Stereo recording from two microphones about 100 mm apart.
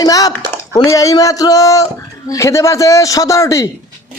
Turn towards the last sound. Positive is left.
turn(degrees=35)  # may be behind; listen again after turning